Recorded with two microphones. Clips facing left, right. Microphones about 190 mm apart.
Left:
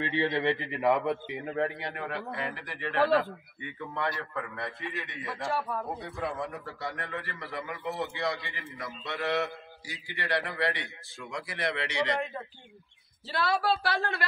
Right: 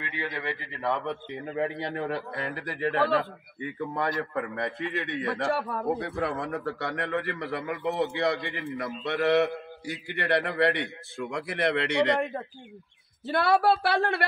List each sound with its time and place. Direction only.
0.0 s a man's voice: 30° left (ahead or behind); by 1.1 s 15° left (ahead or behind)
1.3 s a man's voice: centre (ahead or behind)
1.8 s speech: 30° right (ahead or behind)
4.1 s a man's voice: 20° right (ahead or behind)
4.9 s speech: 65° right (ahead or behind)
7.5 s a man's voice: 55° right (ahead or behind)